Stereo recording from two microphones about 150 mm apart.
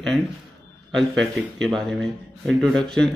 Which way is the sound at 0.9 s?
Centre (ahead or behind).